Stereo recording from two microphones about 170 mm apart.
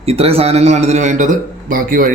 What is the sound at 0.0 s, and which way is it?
A man's voice, 35° right (ahead or behind).